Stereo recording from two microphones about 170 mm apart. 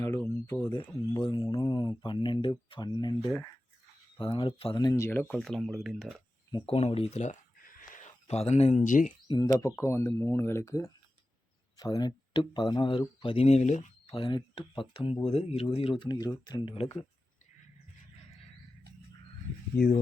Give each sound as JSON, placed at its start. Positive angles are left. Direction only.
{"t": 0.3, "sound": "speech", "side_deg": 15}
{"t": 0.7, "sound": "speech", "side_deg": 30}
{"t": 4.2, "sound": "speech", "side_deg": 30}
{"t": 5.3, "sound": "speech", "side_deg": 0}
{"t": 6.5, "sound": "speech", "side_deg": 30}
{"t": 9.3, "sound": "speech", "side_deg": 20}
{"t": 14.2, "sound": "speech", "side_deg": 30}